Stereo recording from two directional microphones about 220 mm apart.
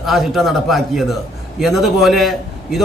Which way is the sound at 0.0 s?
Centre (ahead or behind).